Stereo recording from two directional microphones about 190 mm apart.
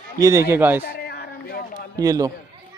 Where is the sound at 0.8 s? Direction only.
60° left (ahead or behind).